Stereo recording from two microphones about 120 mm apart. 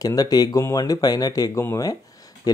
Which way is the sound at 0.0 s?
30° left (ahead or behind).